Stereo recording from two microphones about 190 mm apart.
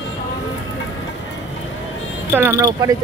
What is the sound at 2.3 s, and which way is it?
Speech, 15° right (ahead or behind).